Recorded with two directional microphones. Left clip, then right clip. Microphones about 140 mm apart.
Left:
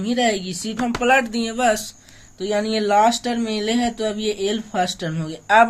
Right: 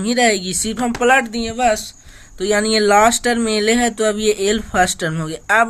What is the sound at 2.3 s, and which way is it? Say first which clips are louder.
Speech: right 6 dB; 55° right (ahead or behind).